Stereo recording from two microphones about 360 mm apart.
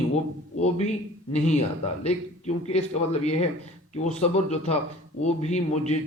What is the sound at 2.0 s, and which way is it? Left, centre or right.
A man's voice, centre.